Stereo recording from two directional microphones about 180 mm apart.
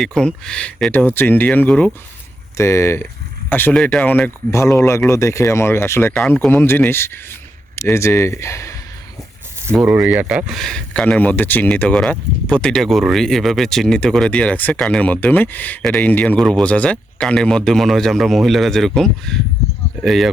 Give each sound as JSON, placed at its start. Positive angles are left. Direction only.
{"t": 0.0, "sound": "speech", "side_deg": 5}
{"t": 6.1, "sound": "speech", "side_deg": 5}
{"t": 9.7, "sound": "speech", "side_deg": -5}